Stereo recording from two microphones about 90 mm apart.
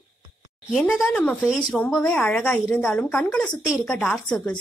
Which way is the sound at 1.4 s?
5° right (ahead or behind).